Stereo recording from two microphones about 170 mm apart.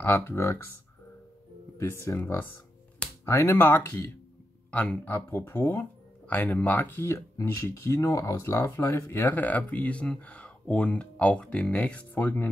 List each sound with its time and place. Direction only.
0.0 s speech: 15° left (ahead or behind)
1.8 s speech: 15° left (ahead or behind)